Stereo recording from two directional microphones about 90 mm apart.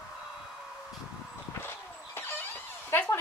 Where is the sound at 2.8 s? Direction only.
30° left (ahead or behind).